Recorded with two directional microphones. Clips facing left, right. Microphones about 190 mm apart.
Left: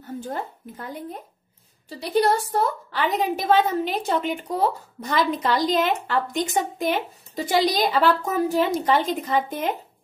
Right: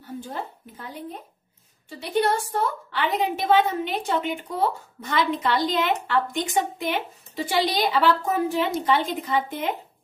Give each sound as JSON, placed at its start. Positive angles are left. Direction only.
{"t": 2.0, "sound": "a woman's voice", "side_deg": 35}